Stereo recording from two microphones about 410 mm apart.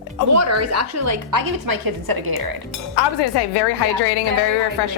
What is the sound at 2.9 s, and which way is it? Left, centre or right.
A woman's voice, left.